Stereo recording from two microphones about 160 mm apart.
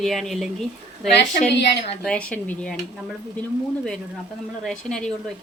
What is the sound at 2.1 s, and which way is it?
Speech, 10° left (ahead or behind).